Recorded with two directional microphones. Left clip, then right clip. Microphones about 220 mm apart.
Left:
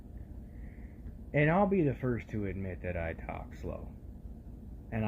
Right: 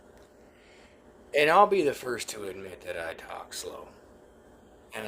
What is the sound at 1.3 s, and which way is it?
Speech, 20° right (ahead or behind).